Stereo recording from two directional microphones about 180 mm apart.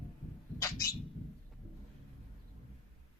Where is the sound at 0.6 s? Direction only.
20° left (ahead or behind).